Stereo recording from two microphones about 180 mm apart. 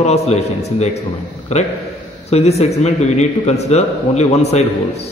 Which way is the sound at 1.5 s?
40° left (ahead or behind).